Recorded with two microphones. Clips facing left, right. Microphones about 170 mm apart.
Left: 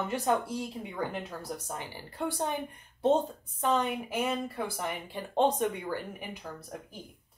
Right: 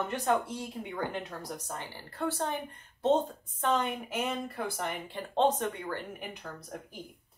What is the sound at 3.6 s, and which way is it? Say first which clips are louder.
Speech: left 1 dB; 5° left (ahead or behind).